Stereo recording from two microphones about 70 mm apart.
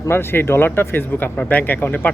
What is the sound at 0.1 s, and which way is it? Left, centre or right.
Speech, left.